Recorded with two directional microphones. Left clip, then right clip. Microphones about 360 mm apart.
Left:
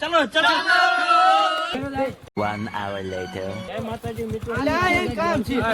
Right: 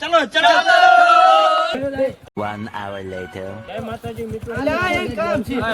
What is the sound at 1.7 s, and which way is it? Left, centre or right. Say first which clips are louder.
Speech: right 5 dB; centre.